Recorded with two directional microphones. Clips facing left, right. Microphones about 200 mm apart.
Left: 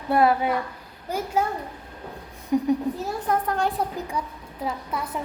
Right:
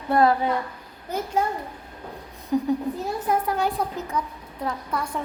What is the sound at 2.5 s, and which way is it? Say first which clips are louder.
Speech: left 1 dB; 15° left (ahead or behind).